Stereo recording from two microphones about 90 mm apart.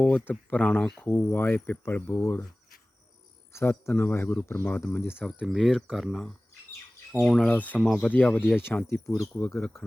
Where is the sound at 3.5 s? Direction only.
30° left (ahead or behind).